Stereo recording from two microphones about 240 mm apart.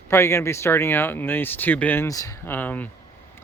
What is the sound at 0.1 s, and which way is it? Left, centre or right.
Speech, centre.